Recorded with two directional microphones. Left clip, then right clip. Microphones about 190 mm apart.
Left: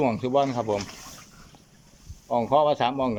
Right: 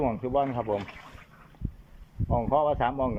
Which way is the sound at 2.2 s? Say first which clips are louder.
Left 4 dB; 5° left (ahead or behind).